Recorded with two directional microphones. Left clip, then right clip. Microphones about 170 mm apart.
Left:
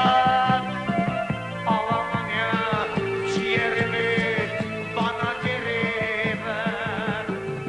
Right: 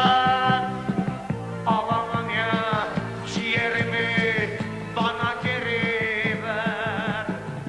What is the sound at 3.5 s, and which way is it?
Music, 35° right (ahead or behind).